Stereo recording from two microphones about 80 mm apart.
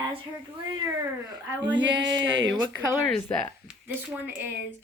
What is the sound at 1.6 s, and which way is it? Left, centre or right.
Speech, centre.